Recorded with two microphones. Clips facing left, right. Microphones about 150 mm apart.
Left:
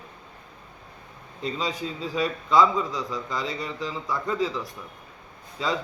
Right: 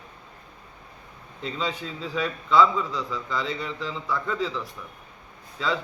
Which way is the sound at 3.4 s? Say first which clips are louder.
Right 1 dB; 40° left (ahead or behind).